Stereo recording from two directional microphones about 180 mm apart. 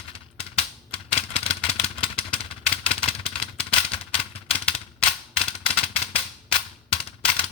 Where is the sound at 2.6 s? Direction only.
30° left (ahead or behind).